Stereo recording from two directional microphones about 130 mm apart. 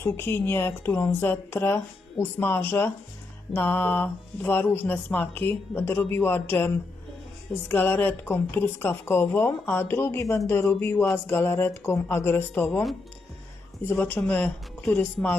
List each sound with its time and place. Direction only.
0.0 s a woman's voice: 20° left (ahead or behind)
13.8 s a woman's voice: 15° left (ahead or behind)